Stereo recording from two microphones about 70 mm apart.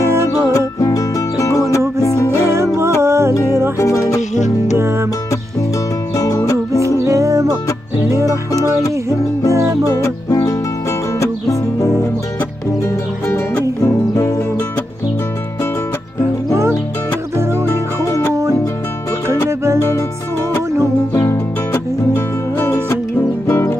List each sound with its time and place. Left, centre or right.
0.3 s music: left
2.5 s music: right
3.7 s music: left
4.7 s music: right
6.1 s music: left
7.0 s music: right
9.8 s music: left
13.3 s music: left
17.6 s music: left
18.3 s music: right
21.1 s music: left
21.7 s music: left